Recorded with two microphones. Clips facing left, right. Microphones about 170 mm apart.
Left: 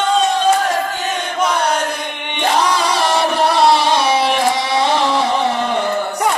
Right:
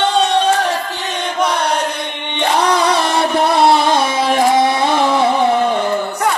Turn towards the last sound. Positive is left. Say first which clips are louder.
# right 4 dB
turn(degrees=-50)  # may be behind; listen again after turning